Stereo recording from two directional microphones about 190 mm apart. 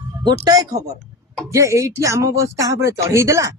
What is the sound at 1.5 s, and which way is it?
A man's voice, 15° right (ahead or behind).